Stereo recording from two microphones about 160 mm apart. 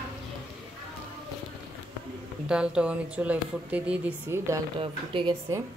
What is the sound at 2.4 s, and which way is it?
Speech, 5° right (ahead or behind).